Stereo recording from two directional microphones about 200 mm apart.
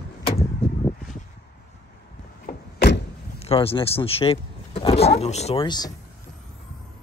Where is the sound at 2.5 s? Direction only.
55° left (ahead or behind).